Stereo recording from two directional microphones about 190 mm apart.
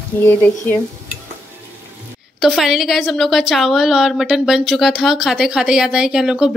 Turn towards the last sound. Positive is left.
turn(degrees=-5)  # may be behind; listen again after turning